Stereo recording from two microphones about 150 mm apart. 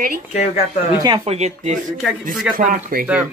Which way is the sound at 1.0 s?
35° right (ahead or behind).